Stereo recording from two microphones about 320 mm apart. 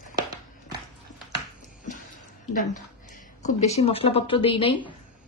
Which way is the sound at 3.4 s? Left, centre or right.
Centre.